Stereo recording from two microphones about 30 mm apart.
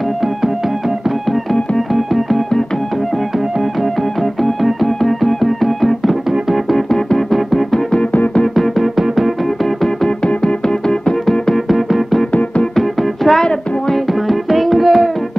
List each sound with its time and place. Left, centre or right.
2.0 s music: centre
4.2 s music: centre
7.7 s music: left
8.5 s music: centre
10.0 s music: left
11.5 s music: centre
12.7 s music: centre
13.4 s music: left
14.2 s music: centre